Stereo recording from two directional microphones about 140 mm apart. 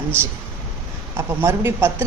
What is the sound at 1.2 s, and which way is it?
Speech, 20° right (ahead or behind).